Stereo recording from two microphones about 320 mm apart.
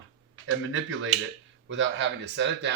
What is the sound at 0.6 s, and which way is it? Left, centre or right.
Speech, right.